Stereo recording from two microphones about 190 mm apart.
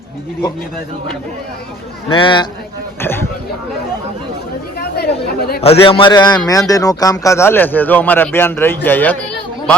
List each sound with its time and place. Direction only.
2.0 s a man's voice: 25° left (ahead or behind)
3.0 s speech: 10° left (ahead or behind)
4.8 s speech: 55° left (ahead or behind)
5.6 s a man's voice: 30° left (ahead or behind); by 9.1 s 10° left (ahead or behind)